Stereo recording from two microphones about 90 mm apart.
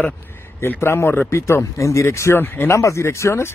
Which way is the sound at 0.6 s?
30° left (ahead or behind).